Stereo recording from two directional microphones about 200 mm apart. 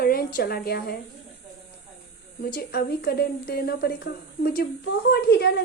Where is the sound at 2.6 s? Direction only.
50° left (ahead or behind).